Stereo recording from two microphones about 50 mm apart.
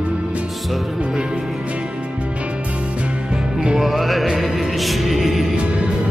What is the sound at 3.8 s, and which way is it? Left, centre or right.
Music, centre.